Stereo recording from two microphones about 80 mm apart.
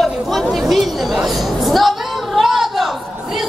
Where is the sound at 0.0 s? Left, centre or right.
Centre.